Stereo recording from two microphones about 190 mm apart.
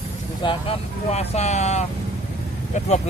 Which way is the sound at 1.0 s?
35° left (ahead or behind).